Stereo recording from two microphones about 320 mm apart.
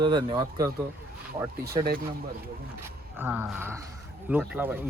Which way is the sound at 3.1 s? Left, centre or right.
Centre.